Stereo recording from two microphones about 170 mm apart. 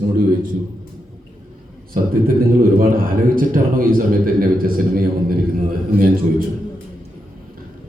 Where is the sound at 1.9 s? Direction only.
60° right (ahead or behind).